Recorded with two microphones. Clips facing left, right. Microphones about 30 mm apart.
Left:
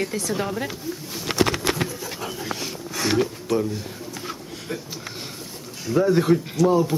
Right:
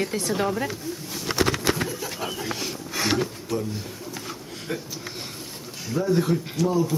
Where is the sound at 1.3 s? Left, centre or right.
Left.